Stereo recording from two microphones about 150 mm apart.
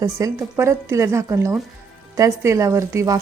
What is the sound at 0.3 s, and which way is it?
Speech, 20° right (ahead or behind).